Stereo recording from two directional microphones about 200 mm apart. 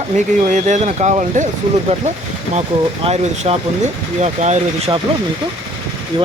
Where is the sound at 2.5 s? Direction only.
30° right (ahead or behind).